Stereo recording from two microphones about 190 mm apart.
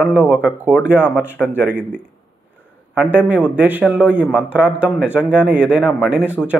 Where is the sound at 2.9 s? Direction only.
5° right (ahead or behind).